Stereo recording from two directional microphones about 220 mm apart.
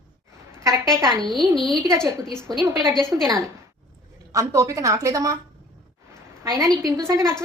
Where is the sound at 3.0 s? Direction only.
15° right (ahead or behind).